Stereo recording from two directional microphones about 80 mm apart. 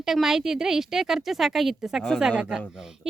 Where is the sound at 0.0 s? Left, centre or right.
Centre.